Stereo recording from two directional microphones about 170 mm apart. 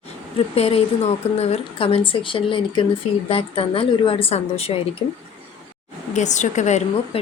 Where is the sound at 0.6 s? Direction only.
35° left (ahead or behind).